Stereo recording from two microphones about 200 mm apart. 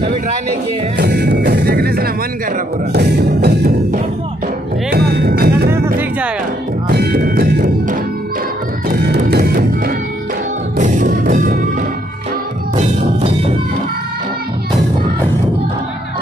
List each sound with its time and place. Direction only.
0.9 s music: 55° right (ahead or behind)
6.9 s music: 50° right (ahead or behind)